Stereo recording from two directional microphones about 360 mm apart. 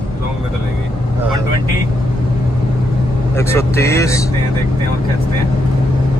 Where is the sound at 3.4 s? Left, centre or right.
Centre.